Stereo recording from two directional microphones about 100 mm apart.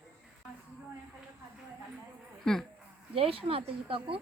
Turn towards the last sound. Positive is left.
turn(degrees=-65)  # may be behind; listen again after turning